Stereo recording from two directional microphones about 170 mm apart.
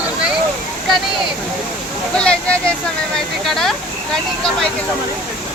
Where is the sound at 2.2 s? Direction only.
5° left (ahead or behind).